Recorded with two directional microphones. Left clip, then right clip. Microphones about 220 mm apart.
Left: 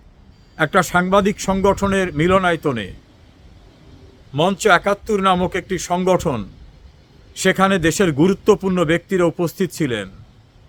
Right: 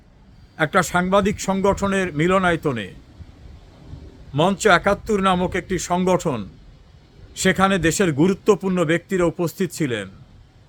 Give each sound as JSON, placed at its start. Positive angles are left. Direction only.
{"t": 0.5, "sound": "speech", "side_deg": 10}
{"t": 4.3, "sound": "speech", "side_deg": 10}